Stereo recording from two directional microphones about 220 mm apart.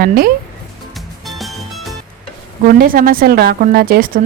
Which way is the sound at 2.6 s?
40° right (ahead or behind).